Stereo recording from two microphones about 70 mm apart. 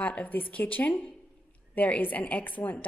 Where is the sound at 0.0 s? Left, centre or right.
Left.